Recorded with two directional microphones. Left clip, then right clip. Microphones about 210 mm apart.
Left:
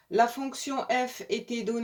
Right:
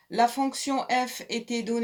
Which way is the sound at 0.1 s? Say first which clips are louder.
Right 1 dB; 35° right (ahead or behind).